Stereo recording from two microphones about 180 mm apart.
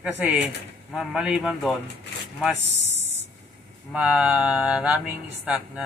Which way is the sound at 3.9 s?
5° right (ahead or behind).